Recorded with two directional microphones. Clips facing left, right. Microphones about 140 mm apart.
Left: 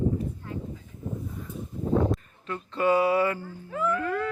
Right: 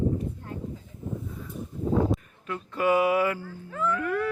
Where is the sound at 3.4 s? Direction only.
15° left (ahead or behind).